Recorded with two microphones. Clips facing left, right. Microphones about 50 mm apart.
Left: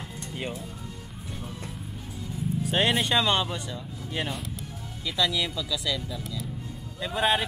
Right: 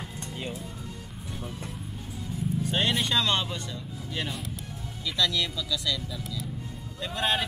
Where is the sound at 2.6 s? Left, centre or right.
Centre.